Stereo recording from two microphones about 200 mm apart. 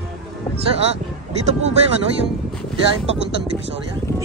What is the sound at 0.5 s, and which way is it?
Speech, 30° right (ahead or behind).